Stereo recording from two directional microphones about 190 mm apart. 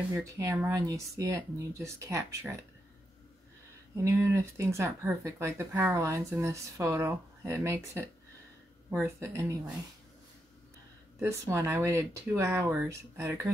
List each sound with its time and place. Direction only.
0.1 s speech: 15° right (ahead or behind)
3.9 s speech: 15° right (ahead or behind)
9.0 s speech: 15° right (ahead or behind)
11.1 s speech: 15° right (ahead or behind)